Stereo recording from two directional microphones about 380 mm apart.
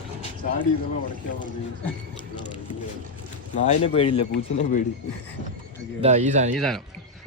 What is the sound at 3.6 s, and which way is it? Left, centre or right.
Speech, centre.